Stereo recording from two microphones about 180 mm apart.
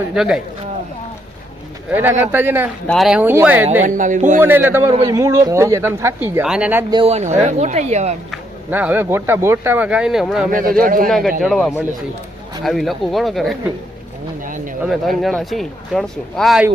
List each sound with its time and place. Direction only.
0.1 s speech: 5° right (ahead or behind)
1.9 s speech: 10° right (ahead or behind)
2.8 s speech: centre (ahead or behind)
3.8 s speech: 45° right (ahead or behind)
4.4 s speech: 10° right (ahead or behind)
6.9 s speech: 35° right (ahead or behind)
8.3 s speech: 10° right (ahead or behind)
10.5 s speech: 50° right (ahead or behind)
11.4 s speech: centre (ahead or behind)
14.4 s a sound: 45° right (ahead or behind)
14.8 s speech: centre (ahead or behind)